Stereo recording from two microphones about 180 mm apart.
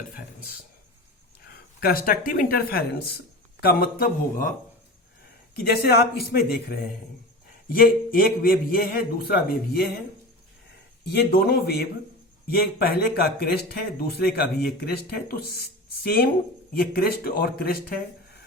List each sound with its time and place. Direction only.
1.8 s a man's voice: 55° left (ahead or behind)
5.5 s a man's voice: 60° left (ahead or behind)
11.0 s a man's voice: 65° left (ahead or behind)